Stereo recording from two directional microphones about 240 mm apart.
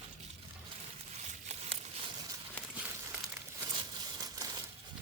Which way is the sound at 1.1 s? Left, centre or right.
Right.